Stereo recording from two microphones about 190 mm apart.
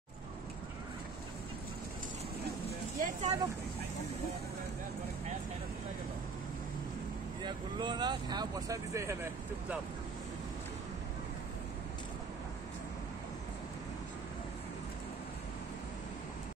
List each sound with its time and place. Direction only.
3.0 s vehicle: 35° right (ahead or behind)
7.4 s speech: 25° right (ahead or behind)